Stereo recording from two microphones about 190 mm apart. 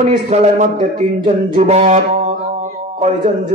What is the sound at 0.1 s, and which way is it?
A man's voice, 30° right (ahead or behind).